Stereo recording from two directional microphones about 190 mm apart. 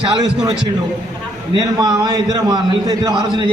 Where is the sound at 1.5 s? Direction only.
20° right (ahead or behind).